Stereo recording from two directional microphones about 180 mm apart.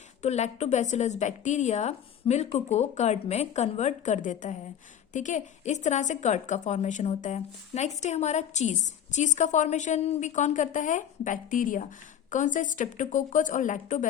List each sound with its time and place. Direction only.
0.2 s a woman's voice: 40° left (ahead or behind)